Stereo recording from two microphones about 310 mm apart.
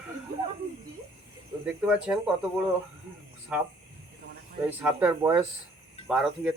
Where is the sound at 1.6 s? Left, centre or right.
Centre.